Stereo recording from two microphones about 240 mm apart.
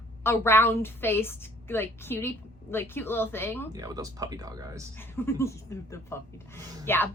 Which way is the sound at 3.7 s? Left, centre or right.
Centre.